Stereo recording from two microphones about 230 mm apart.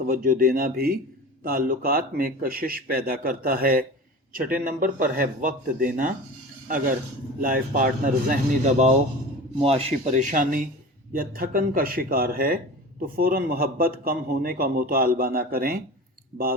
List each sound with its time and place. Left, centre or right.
0.0 s a man's voice: right